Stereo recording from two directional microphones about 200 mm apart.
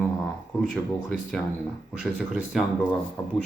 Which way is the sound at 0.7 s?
5° left (ahead or behind).